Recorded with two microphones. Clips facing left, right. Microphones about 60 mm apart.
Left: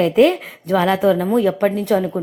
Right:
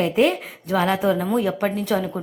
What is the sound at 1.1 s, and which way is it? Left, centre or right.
Speech, left.